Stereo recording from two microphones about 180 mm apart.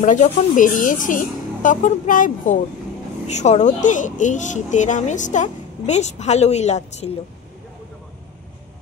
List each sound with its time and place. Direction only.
0.0 s speech: 45° left (ahead or behind)